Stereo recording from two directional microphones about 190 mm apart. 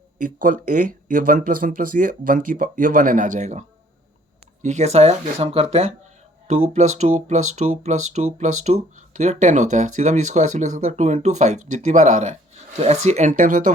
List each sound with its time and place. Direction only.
0.2 s speech: 45° right (ahead or behind)